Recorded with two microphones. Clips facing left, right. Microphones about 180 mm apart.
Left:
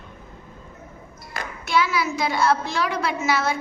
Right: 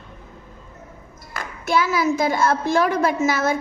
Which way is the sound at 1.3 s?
50° right (ahead or behind).